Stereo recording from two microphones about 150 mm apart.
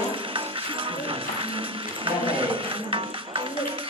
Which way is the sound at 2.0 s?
35° right (ahead or behind).